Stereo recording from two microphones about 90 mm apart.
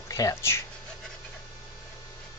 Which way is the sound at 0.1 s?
40° left (ahead or behind).